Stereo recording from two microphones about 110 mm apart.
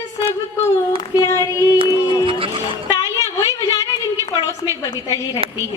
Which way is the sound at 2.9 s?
30° left (ahead or behind).